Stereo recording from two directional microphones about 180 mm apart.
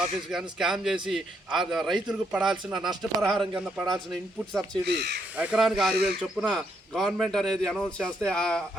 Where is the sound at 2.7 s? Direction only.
25° right (ahead or behind).